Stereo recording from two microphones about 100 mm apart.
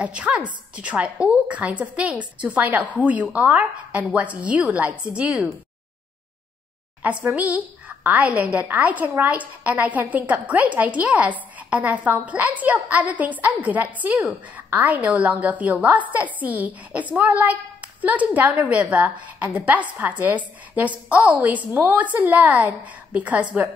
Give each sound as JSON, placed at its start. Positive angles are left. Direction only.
{"t": 0.0, "sound": "a woman's voice", "side_deg": -10}
{"t": 7.0, "sound": "a woman's voice", "side_deg": -15}